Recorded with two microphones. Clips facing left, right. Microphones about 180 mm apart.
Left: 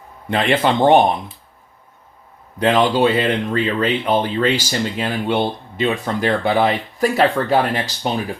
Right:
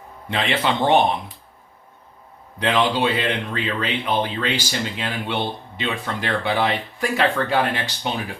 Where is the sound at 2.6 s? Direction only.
45° left (ahead or behind).